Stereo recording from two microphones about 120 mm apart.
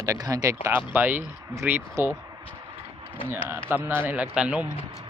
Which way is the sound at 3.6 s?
20° right (ahead or behind).